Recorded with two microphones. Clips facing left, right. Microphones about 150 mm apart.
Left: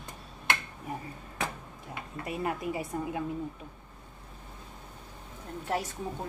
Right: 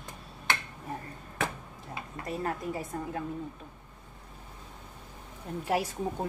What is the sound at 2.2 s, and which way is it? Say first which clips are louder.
A woman's voice: left 1 dB; 10° left (ahead or behind).